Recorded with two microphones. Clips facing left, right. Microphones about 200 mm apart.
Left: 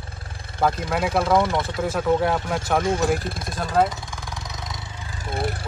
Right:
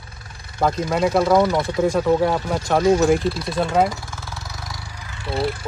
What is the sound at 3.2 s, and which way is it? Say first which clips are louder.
Speech: right 8 dB; 50° left (ahead or behind).